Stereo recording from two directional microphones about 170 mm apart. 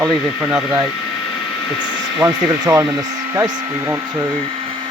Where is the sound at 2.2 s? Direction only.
20° right (ahead or behind).